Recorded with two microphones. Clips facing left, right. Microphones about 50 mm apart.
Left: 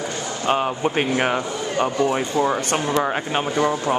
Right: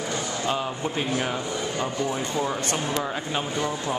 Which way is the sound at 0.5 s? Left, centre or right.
Left.